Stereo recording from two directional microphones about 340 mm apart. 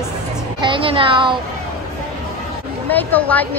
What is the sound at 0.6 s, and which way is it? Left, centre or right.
Speech, centre.